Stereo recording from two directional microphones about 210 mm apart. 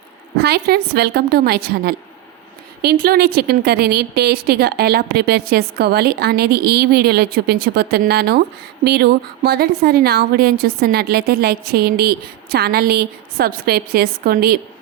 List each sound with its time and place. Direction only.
0.3 s speech: 50° right (ahead or behind)